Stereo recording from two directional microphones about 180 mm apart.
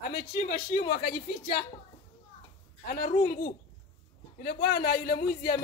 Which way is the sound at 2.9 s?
55° left (ahead or behind).